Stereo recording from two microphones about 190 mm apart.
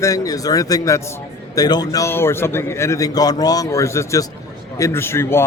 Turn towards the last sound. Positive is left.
turn(degrees=15)  # may be behind; listen again after turning